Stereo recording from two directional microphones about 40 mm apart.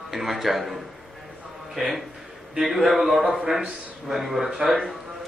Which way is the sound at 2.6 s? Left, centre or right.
Centre.